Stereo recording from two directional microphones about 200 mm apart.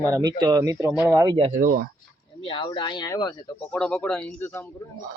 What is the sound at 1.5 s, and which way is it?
Speech, 45° right (ahead or behind).